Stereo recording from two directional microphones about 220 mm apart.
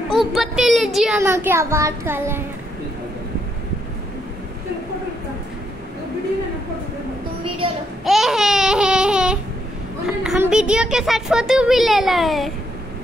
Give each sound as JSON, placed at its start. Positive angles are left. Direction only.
{"t": 0.3, "sound": "speech", "side_deg": 0}
{"t": 7.6, "sound": "child singing", "side_deg": -25}
{"t": 8.0, "sound": "babbling", "side_deg": 0}
{"t": 10.2, "sound": "a child's voice", "side_deg": -5}